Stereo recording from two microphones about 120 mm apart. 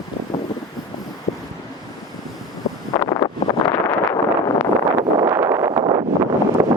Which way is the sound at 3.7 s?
25° left (ahead or behind).